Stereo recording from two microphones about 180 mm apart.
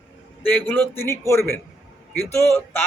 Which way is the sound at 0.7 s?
10° left (ahead or behind).